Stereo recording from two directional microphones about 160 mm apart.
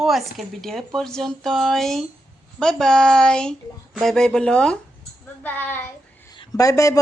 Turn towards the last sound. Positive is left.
turn(degrees=20)  # may be behind; listen again after turning